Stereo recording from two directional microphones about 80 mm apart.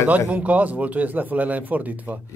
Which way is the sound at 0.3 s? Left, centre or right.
Centre.